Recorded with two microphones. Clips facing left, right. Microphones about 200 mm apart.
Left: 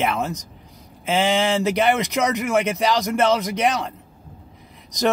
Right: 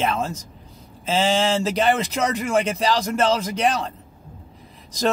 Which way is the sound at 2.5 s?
30° right (ahead or behind).